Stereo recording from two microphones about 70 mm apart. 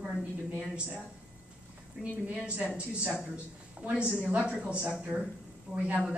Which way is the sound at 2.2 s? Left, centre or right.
Centre.